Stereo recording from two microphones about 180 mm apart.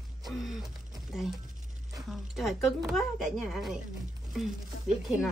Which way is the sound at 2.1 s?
Centre (ahead or behind).